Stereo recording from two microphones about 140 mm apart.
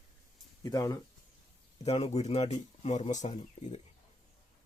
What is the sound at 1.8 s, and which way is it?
Speech, 45° left (ahead or behind).